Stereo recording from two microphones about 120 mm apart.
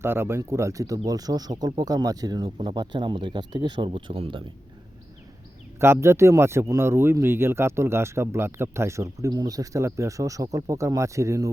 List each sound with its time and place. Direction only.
0.0 s speech: 20° right (ahead or behind); by 3.8 s 40° right (ahead or behind)
3.8 s speech: 50° right (ahead or behind)
5.8 s speech: 20° right (ahead or behind)